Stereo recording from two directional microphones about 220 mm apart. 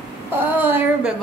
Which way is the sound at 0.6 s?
10° right (ahead or behind).